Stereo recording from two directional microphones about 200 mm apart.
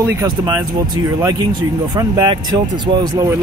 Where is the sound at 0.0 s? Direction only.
15° right (ahead or behind).